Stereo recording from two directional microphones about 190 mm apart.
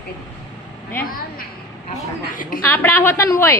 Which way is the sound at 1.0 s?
50° left (ahead or behind).